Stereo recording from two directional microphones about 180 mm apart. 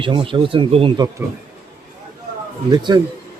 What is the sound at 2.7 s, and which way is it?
Speech, 25° right (ahead or behind).